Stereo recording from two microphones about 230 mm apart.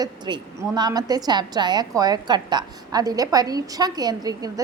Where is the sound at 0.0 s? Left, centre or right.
Centre.